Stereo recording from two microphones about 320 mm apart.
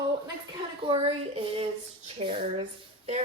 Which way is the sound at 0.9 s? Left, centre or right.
Centre.